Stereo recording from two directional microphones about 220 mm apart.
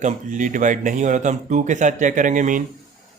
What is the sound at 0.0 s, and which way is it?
Speech, 35° right (ahead or behind).